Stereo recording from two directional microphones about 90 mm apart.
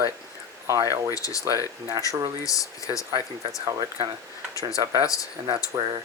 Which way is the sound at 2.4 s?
40° left (ahead or behind).